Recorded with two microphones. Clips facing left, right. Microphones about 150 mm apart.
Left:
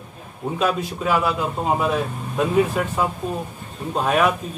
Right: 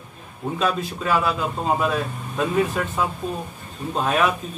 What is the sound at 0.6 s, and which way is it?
A man's voice, 10° left (ahead or behind).